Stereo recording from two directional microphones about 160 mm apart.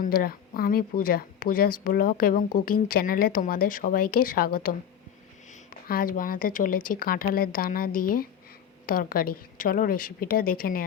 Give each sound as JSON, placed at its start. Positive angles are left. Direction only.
{"t": 0.0, "sound": "speech", "side_deg": 65}